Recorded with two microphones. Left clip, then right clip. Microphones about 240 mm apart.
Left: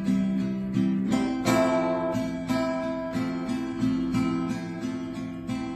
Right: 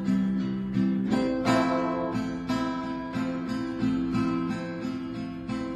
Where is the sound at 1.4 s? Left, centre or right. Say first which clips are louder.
Left 3 dB; left.